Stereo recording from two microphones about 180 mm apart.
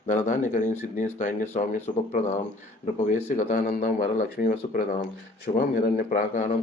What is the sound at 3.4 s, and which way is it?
Speech, 50° left (ahead or behind).